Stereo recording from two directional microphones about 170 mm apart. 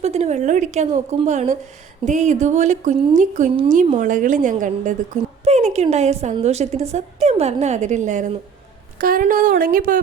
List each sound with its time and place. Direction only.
0.0 s a woman's voice: 40° right (ahead or behind)